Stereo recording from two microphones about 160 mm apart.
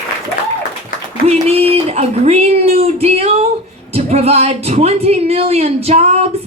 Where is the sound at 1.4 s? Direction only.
40° right (ahead or behind).